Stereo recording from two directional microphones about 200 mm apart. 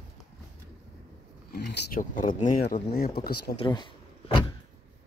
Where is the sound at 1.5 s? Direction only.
50° left (ahead or behind).